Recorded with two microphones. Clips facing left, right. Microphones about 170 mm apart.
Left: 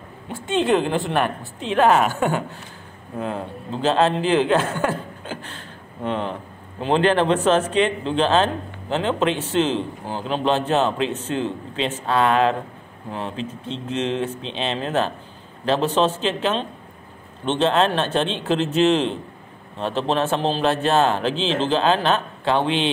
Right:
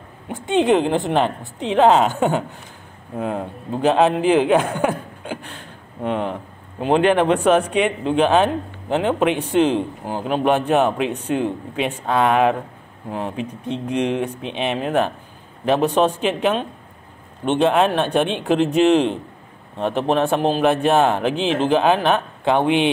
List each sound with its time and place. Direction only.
0.3 s a woman's voice: 15° right (ahead or behind)